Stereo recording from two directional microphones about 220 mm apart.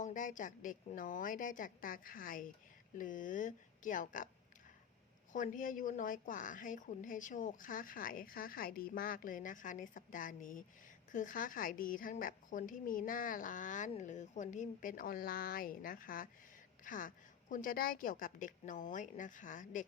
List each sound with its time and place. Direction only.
0.0 s a woman's voice: 35° left (ahead or behind)
5.3 s a woman's voice: 35° left (ahead or behind)